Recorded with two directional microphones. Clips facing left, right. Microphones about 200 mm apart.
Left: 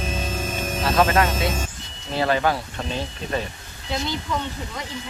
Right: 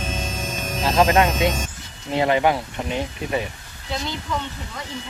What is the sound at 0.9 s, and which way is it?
Speech, 20° right (ahead or behind).